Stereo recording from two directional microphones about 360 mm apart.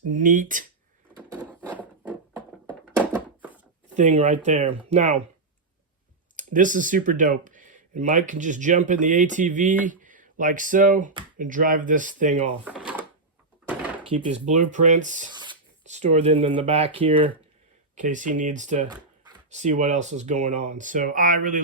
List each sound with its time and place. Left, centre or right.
0.1 s speech: right
1.1 s a sound: centre
3.9 s speech: centre
6.3 s speech: right
12.6 s drawer open or close: centre
14.0 s speech: centre